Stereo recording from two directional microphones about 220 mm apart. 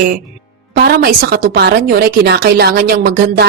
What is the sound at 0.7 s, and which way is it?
A woman's voice, 45° right (ahead or behind).